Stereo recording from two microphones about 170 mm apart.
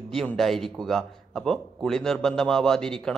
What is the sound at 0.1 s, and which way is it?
A man's voice, 5° left (ahead or behind).